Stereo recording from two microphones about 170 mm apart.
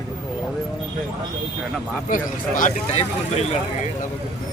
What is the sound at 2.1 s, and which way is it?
Speech, 50° left (ahead or behind).